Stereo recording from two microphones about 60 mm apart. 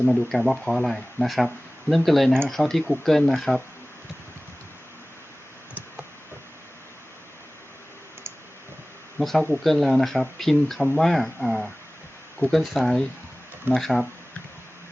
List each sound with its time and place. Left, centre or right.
0.3 s speech: centre
9.1 s speech: centre